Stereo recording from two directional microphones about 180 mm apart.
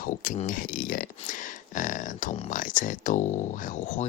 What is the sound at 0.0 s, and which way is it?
Speech, 50° left (ahead or behind).